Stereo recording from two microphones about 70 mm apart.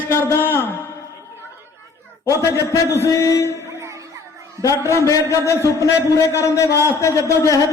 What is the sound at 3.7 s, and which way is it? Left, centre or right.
Music, right.